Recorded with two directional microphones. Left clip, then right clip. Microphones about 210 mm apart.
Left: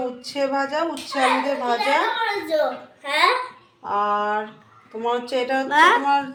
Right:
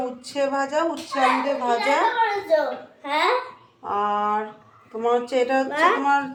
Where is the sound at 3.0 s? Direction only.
45° left (ahead or behind).